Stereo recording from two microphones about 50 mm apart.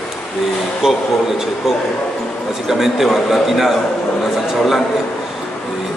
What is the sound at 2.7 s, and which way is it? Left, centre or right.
A man's voice, centre.